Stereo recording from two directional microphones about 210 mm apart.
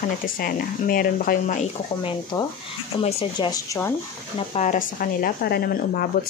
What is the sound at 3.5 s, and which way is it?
Speech, 15° left (ahead or behind).